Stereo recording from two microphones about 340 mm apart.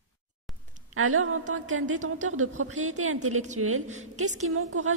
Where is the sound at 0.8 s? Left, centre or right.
Right.